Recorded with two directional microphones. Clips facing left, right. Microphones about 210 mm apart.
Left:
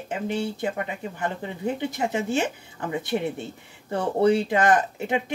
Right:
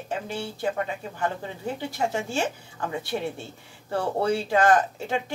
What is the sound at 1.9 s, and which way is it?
Speech, 20° left (ahead or behind).